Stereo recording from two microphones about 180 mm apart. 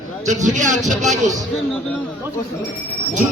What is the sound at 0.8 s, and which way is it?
Speech, centre (ahead or behind).